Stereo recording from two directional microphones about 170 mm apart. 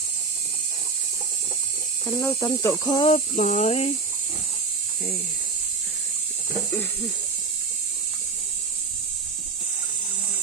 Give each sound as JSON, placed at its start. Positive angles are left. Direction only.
{"t": 2.0, "sound": "speech", "side_deg": 15}
{"t": 3.1, "sound": "speech", "side_deg": 45}